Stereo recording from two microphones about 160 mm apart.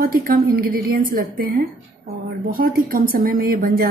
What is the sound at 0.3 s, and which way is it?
A woman's voice, 65° right (ahead or behind).